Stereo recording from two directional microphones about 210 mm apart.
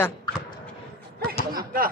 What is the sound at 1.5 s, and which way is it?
Speech, 45° right (ahead or behind).